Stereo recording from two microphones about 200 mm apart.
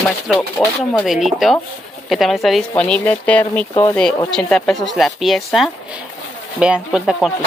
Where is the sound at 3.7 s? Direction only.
20° left (ahead or behind).